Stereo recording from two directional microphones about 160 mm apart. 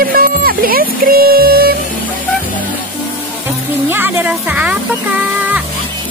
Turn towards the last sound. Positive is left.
turn(degrees=-10)  # may be behind; listen again after turning